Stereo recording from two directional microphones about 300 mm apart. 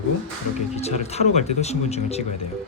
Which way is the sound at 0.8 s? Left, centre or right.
Left.